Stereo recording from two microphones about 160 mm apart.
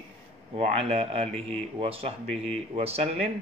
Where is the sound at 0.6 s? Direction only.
40° right (ahead or behind).